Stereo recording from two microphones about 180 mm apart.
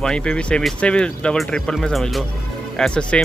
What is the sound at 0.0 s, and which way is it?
Speech, 5° left (ahead or behind).